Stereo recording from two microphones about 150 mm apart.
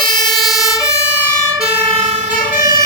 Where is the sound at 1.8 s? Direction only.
40° right (ahead or behind).